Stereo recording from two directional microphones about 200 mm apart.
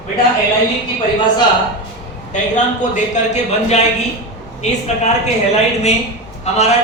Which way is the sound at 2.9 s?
35° left (ahead or behind).